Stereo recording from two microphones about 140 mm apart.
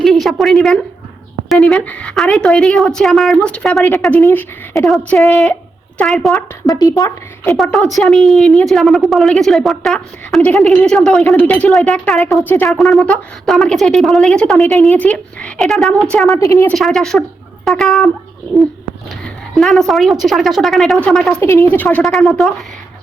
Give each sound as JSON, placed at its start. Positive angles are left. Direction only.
{"t": 0.0, "sound": "a woman's voice", "side_deg": 0}
{"t": 4.2, "sound": "speech", "side_deg": 15}
{"t": 4.9, "sound": "a woman's voice", "side_deg": 0}
{"t": 6.7, "sound": "speech", "side_deg": 25}
{"t": 7.5, "sound": "a woman's voice", "side_deg": 0}
{"t": 12.4, "sound": "speech", "side_deg": 15}
{"t": 12.6, "sound": "a woman's voice", "side_deg": 0}
{"t": 16.3, "sound": "speech", "side_deg": 20}
{"t": 16.6, "sound": "a woman's voice", "side_deg": 0}
{"t": 19.2, "sound": "a woman's voice", "side_deg": 0}
{"t": 21.4, "sound": "speech", "side_deg": 20}
{"t": 21.8, "sound": "a woman's voice", "side_deg": 0}